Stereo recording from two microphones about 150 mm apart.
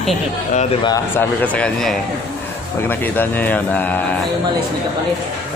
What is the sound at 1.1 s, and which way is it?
Speech, 10° left (ahead or behind).